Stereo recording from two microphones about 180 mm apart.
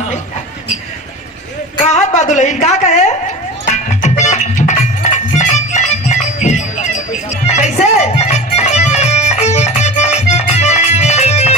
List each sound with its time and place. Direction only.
2.0 s a woman's voice: 40° left (ahead or behind)
3.6 s music: 40° left (ahead or behind)